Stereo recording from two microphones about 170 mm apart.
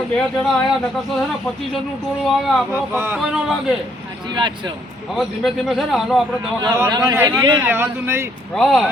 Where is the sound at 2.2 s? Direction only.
Centre (ahead or behind).